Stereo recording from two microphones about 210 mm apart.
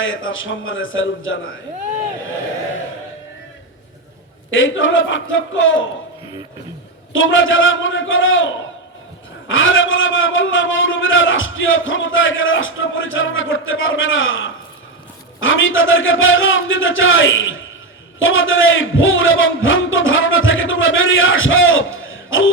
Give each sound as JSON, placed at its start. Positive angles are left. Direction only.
{"t": 0.0, "sound": "a man's voice", "side_deg": 70}
{"t": 4.5, "sound": "a man's voice", "side_deg": 65}
{"t": 7.1, "sound": "a man's voice", "side_deg": 65}